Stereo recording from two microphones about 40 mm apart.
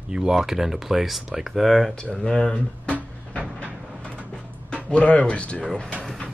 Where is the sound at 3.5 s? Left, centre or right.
Left.